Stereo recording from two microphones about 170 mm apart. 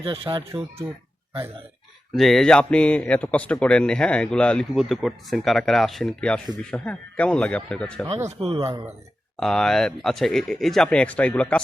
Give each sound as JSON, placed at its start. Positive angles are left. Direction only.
{"t": 0.0, "sound": "speech", "side_deg": -30}
{"t": 0.8, "sound": "speech", "side_deg": -10}
{"t": 2.1, "sound": "a man's voice", "side_deg": 0}
{"t": 8.3, "sound": "speech", "side_deg": -35}
{"t": 9.4, "sound": "a man's voice", "side_deg": 5}